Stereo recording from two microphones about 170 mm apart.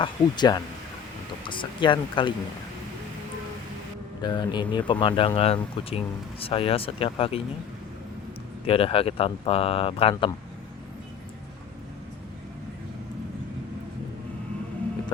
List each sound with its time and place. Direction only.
0.0 s speech: 25° left (ahead or behind)
4.2 s speech: 25° left (ahead or behind)
8.6 s speech: 35° left (ahead or behind)